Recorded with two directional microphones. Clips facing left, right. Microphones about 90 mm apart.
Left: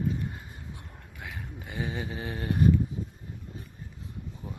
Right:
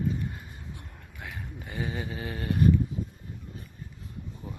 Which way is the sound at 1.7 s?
15° left (ahead or behind).